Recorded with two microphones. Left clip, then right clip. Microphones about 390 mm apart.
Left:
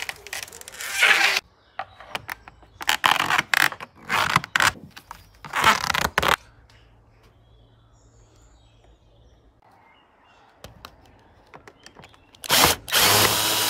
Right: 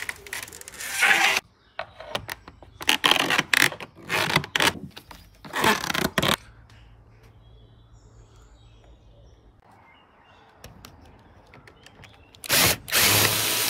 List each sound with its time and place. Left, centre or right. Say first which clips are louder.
0.0 s coin: left 1 dB; centre
5.4 s a sound: left 3 dB; centre
12.4 s drill: left 3 dB; centre